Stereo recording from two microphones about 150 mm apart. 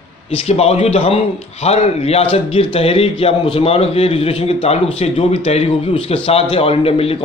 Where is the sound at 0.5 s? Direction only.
45° left (ahead or behind).